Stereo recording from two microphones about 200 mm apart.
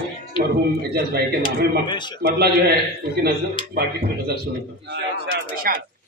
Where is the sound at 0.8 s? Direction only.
50° right (ahead or behind).